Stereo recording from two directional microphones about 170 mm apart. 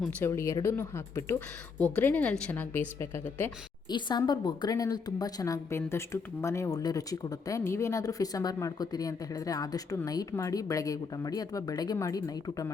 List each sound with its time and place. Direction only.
0.3 s speech: 15° left (ahead or behind)
3.8 s a woman's voice: 25° left (ahead or behind)